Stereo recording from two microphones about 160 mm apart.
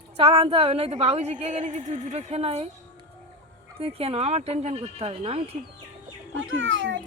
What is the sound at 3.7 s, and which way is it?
A woman's voice, 40° right (ahead or behind).